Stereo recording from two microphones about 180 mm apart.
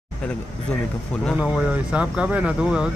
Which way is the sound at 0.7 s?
5° left (ahead or behind).